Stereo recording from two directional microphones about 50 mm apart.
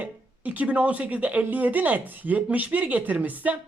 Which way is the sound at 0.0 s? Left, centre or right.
Right.